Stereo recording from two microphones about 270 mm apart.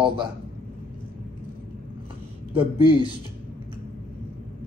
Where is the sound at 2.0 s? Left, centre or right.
Right.